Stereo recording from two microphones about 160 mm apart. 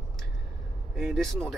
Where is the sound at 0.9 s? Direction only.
Centre (ahead or behind).